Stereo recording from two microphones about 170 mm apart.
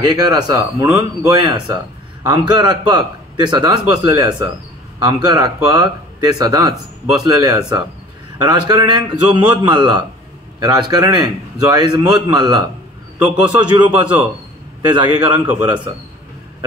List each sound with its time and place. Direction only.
0.1 s a man's voice: 25° right (ahead or behind)
15.1 s a man's voice: 25° right (ahead or behind)